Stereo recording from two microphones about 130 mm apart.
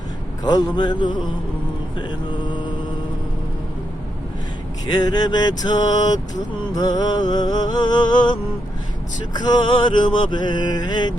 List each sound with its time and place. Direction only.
0.4 s mantra: 30° left (ahead or behind)
4.9 s mantra: 30° left (ahead or behind)